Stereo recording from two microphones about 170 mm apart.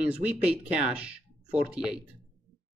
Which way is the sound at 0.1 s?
5° right (ahead or behind).